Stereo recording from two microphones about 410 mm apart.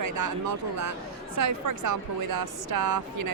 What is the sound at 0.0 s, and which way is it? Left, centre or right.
Speech, right.